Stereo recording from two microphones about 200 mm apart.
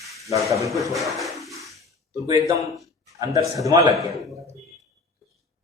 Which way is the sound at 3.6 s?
20° right (ahead or behind).